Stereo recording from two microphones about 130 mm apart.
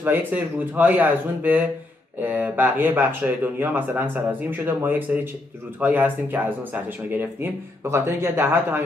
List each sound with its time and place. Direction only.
0.0 s speech: 15° right (ahead or behind)